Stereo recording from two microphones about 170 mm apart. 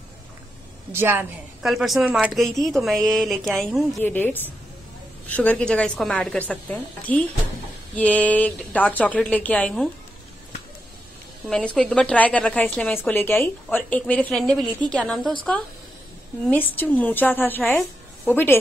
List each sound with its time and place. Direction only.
0.9 s a woman's voice: 15° right (ahead or behind)
1.6 s speech: centre (ahead or behind)
4.0 s a woman's voice: 10° left (ahead or behind)
11.4 s a woman's voice: 5° left (ahead or behind)
16.4 s a woman's voice: 10° left (ahead or behind)